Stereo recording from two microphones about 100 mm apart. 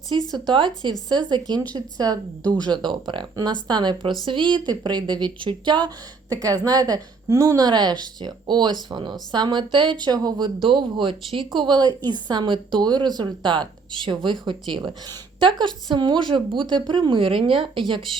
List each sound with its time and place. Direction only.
0.3 s a woman's voice: 45° right (ahead or behind)
4.6 s a woman's voice: 45° right (ahead or behind)
10.6 s a woman's voice: 55° right (ahead or behind)